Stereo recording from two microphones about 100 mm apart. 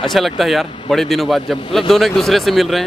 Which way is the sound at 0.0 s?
Centre (ahead or behind).